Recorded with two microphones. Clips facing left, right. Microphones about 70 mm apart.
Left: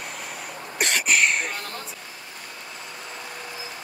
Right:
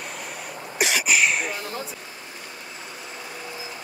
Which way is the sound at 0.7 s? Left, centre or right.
Centre.